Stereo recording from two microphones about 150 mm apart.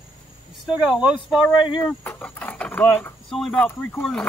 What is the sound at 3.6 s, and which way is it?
Speech, 10° left (ahead or behind).